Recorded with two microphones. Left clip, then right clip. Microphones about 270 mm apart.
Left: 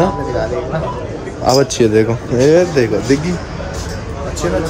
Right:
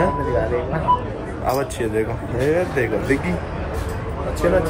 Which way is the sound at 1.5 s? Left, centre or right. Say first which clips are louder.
Left 10 dB; left.